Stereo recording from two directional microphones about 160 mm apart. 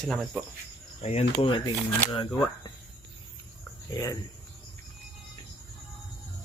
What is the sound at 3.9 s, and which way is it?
Speech, 20° left (ahead or behind).